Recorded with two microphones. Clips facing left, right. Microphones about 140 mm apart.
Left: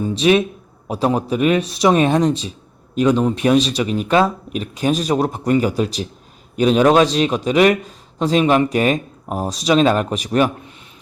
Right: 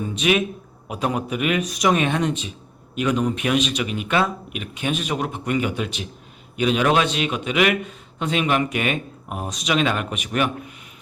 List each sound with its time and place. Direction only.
0.0 s a man's voice: 35° left (ahead or behind)